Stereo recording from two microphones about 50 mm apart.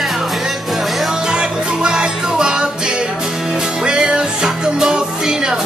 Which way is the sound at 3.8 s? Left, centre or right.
Centre.